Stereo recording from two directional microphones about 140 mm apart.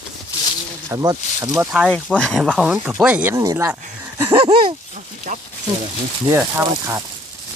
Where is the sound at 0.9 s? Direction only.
25° right (ahead or behind).